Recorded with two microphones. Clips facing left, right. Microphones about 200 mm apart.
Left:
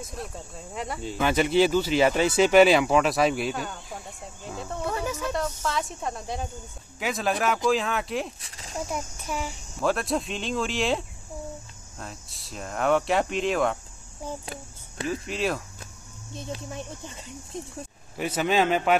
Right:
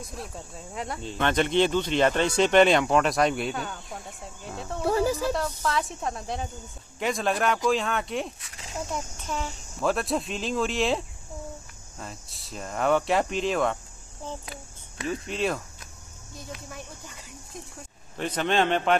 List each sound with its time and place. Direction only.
0.0 s speech: centre (ahead or behind)
4.8 s snake: 35° right (ahead or behind)
5.3 s speech: centre (ahead or behind)
8.4 s a sound: 30° left (ahead or behind)
8.9 s a man's voice: 10° left (ahead or behind)
9.8 s speech: centre (ahead or behind)
15.0 s speech: centre (ahead or behind)
16.3 s speech: 25° left (ahead or behind)
18.1 s a man's voice: 10° left (ahead or behind)